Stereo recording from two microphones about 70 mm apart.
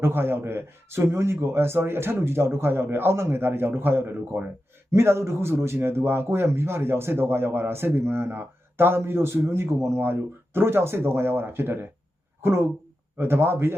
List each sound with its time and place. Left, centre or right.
0.0 s speech: right